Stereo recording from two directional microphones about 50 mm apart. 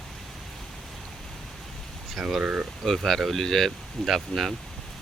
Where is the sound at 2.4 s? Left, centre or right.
Right.